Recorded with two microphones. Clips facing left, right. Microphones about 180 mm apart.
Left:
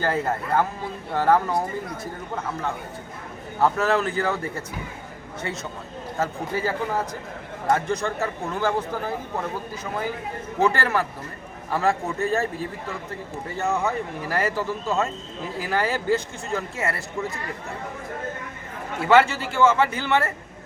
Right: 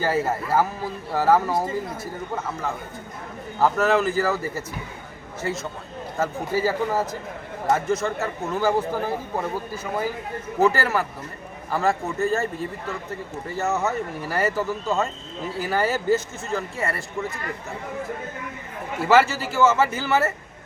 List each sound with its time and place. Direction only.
0.0 s a man's voice: 5° right (ahead or behind)
10.6 s a man's voice: 5° right (ahead or behind)
13.7 s a man's voice: 5° right (ahead or behind)
19.0 s a man's voice: 5° right (ahead or behind)